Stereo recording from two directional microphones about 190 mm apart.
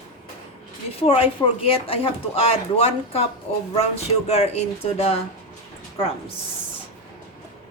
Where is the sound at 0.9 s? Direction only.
30° left (ahead or behind).